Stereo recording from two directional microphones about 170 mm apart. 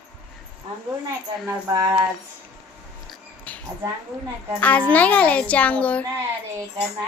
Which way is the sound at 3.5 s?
10° left (ahead or behind).